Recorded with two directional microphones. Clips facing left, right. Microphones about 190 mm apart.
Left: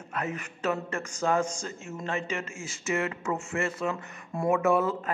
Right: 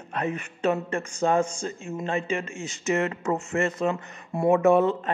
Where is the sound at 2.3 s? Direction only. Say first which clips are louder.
Right 5 dB; 35° right (ahead or behind).